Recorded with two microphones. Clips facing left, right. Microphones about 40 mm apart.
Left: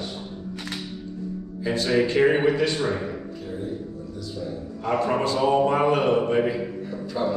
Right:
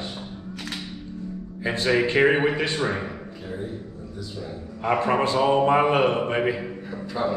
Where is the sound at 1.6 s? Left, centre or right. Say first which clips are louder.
Even; right.